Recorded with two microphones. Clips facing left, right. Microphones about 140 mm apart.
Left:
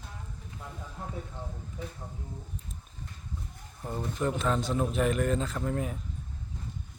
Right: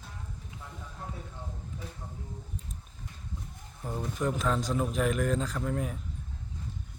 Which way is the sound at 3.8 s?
Centre (ahead or behind).